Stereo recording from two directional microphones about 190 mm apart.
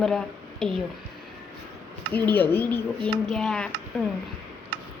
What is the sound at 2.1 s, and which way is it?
Speech, 10° left (ahead or behind).